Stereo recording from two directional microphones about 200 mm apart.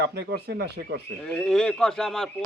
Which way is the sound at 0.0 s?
55° right (ahead or behind).